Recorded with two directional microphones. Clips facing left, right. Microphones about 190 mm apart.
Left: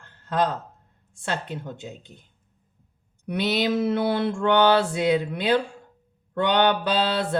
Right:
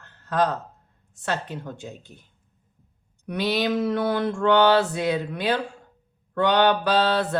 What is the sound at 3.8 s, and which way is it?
Speech, 25° left (ahead or behind).